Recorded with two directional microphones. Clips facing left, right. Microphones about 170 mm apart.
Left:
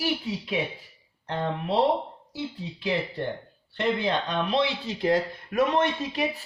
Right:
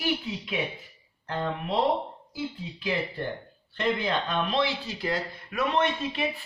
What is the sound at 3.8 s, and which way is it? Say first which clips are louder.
Speech: left 2 dB; 20° left (ahead or behind).